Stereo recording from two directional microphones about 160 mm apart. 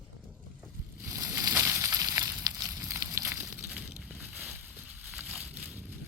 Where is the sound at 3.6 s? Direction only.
5° right (ahead or behind).